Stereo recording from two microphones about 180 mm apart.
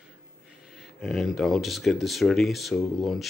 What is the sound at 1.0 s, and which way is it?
Speech, centre (ahead or behind).